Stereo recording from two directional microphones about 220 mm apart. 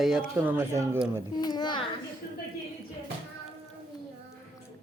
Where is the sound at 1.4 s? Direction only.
20° left (ahead or behind).